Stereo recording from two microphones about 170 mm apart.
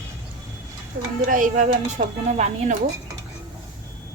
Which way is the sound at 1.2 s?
50° right (ahead or behind).